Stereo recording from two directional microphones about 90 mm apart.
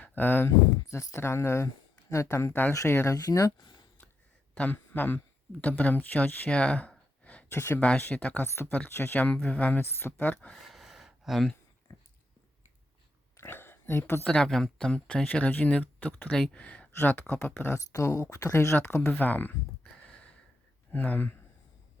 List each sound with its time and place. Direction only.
0.2 s speech: 25° left (ahead or behind)
3.2 s speech: 45° left (ahead or behind)
3.6 s a sound: 60° left (ahead or behind)
4.5 s speech: 20° left (ahead or behind)
7.5 s speech: 25° left (ahead or behind)
8.4 s speech: 30° left (ahead or behind)
10.5 s gasp: centre (ahead or behind)
11.9 s dog: 40° left (ahead or behind)
13.3 s a sound: 25° left (ahead or behind)
14.3 s speech: 10° left (ahead or behind)
20.9 s speech: 20° left (ahead or behind)